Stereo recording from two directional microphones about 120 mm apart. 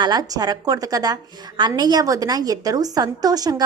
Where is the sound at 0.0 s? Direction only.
35° right (ahead or behind).